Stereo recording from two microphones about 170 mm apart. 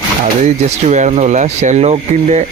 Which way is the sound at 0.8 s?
45° right (ahead or behind).